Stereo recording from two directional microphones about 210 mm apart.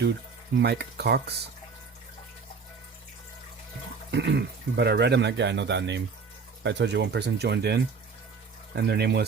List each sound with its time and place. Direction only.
0.6 s speech: 50° right (ahead or behind)
4.1 s speech: 55° right (ahead or behind)